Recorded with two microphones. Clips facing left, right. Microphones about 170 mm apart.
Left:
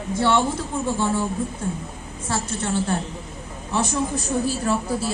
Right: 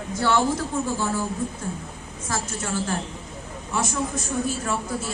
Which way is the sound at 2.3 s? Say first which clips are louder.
Left 3 dB; 30° left (ahead or behind).